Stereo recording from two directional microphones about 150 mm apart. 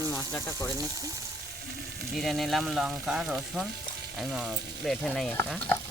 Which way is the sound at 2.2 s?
Centre (ahead or behind).